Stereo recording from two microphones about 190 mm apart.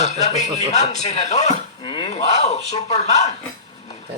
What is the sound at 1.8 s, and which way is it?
Speech, 25° left (ahead or behind).